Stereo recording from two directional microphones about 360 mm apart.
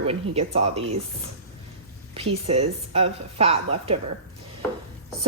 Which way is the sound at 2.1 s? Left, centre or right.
Centre.